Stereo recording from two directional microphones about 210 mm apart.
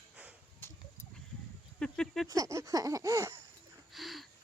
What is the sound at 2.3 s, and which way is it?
A child's voice, 15° right (ahead or behind).